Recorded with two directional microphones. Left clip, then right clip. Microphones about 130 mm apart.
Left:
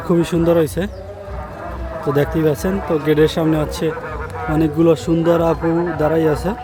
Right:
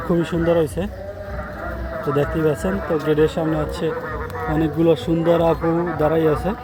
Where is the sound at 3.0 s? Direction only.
75° left (ahead or behind).